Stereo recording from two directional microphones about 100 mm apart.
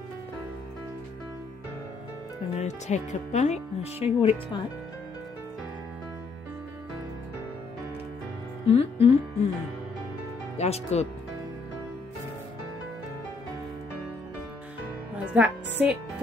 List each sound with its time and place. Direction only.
2.5 s speech: 90° left
8.6 s speech: 75° left (ahead or behind)
10.6 s speech: 90° left
15.3 s a woman's voice: 15° right (ahead or behind)